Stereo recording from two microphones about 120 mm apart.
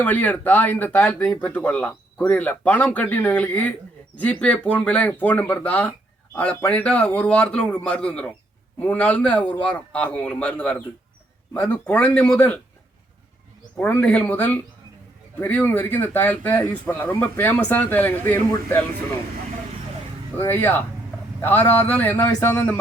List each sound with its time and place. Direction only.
0.0 s speech: 15° left (ahead or behind)
13.7 s speech: 15° left (ahead or behind)
20.4 s speech: 15° left (ahead or behind)